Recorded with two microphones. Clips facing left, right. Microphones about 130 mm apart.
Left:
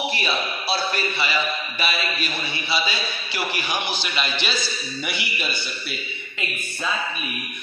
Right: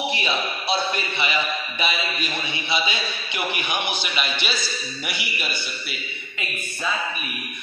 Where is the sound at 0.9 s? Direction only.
20° right (ahead or behind).